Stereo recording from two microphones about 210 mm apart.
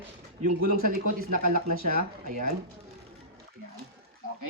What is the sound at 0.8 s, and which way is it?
Speech, 45° right (ahead or behind).